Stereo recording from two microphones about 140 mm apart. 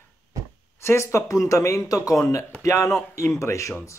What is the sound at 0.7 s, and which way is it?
Speech, 20° left (ahead or behind).